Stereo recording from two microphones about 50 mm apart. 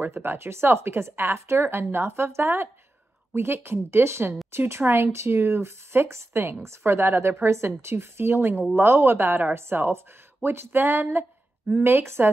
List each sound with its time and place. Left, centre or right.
0.1 s speech: right